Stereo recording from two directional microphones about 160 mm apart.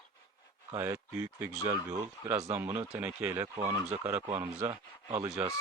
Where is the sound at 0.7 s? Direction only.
20° right (ahead or behind).